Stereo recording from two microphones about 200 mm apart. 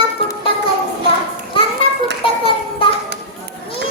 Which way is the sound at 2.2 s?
25° left (ahead or behind).